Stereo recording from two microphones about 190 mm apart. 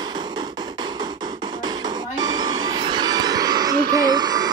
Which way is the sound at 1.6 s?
20° right (ahead or behind).